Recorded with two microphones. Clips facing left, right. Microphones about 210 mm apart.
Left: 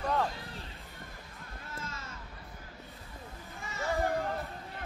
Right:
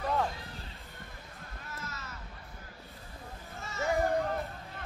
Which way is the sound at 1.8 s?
30° left (ahead or behind).